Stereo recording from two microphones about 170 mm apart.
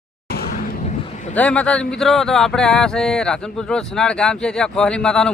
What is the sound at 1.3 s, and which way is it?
Speech, 10° left (ahead or behind).